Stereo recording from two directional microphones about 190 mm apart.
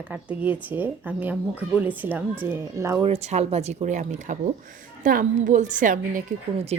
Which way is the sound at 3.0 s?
35° right (ahead or behind).